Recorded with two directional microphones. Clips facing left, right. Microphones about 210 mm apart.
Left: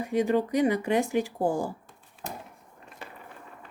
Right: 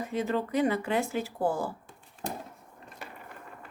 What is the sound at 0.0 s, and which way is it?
Speech, 15° left (ahead or behind).